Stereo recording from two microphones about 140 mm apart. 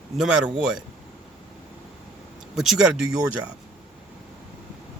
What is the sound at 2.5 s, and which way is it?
Speech, 5° right (ahead or behind).